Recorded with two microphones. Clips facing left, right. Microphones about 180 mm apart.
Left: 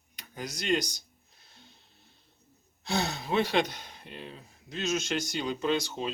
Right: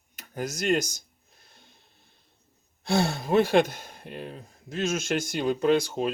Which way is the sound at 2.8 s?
50° right (ahead or behind).